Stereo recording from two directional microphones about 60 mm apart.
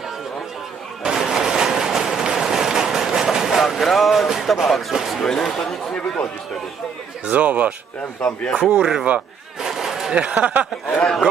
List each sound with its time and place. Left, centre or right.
1.0 s a sound: centre
4.3 s speech: centre
7.2 s speech: right
8.2 s speech: centre
8.5 s speech: centre
9.6 s a sound: centre
10.1 s speech: right